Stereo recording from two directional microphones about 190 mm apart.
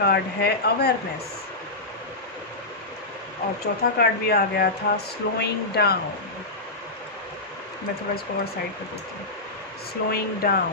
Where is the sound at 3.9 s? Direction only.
55° left (ahead or behind).